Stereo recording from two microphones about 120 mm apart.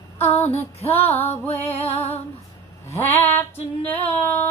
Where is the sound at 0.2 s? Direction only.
60° left (ahead or behind).